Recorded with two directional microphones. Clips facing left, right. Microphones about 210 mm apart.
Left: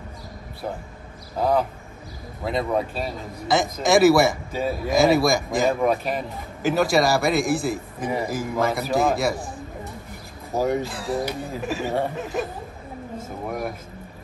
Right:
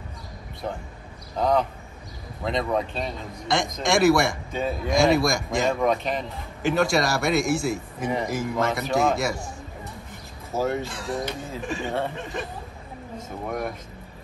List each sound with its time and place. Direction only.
1.3 s a man's voice: 5° left (ahead or behind)
10.7 s a man's voice: centre (ahead or behind)
13.5 s a man's voice: 5° left (ahead or behind)